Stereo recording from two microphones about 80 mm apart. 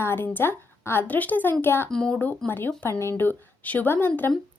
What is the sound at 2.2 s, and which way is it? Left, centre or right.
A woman's voice, left.